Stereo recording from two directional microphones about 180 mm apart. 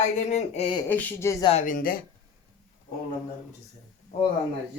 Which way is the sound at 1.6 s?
50° left (ahead or behind).